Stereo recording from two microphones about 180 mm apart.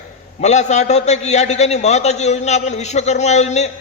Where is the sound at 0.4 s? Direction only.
40° left (ahead or behind).